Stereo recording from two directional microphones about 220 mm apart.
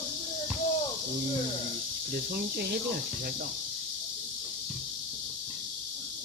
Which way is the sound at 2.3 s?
45° right (ahead or behind).